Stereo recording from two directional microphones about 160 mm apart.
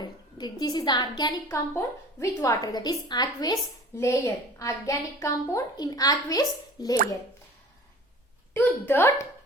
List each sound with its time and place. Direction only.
0.0 s a woman's voice: 25° left (ahead or behind)
8.5 s a woman's voice: 15° left (ahead or behind)